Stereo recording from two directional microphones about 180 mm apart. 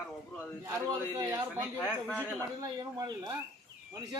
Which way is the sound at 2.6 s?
20° right (ahead or behind).